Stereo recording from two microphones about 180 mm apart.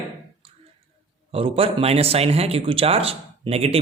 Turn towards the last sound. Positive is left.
turn(degrees=-35)  # may be behind; listen again after turning